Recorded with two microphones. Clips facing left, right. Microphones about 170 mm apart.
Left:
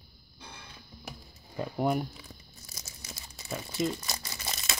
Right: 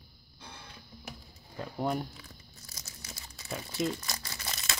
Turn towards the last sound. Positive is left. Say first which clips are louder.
# left 1 dB
turn(degrees=20)  # may be behind; listen again after turning